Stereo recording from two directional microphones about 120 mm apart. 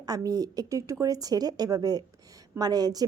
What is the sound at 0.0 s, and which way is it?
A woman's voice, 30° right (ahead or behind).